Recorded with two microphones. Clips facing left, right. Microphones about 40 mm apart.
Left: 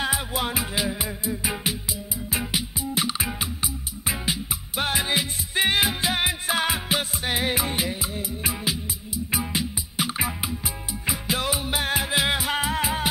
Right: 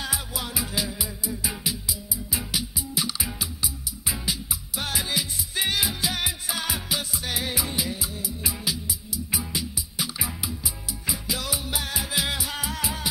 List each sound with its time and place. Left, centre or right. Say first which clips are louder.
0.0 s music: left 6 dB; left